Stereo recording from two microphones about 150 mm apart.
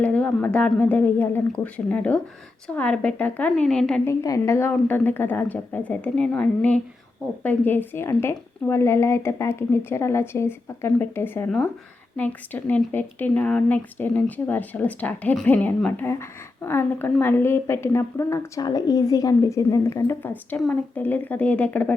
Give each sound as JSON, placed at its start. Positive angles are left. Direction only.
{"t": 0.0, "sound": "a woman's voice", "side_deg": 10}
{"t": 4.0, "sound": "a woman's voice", "side_deg": 20}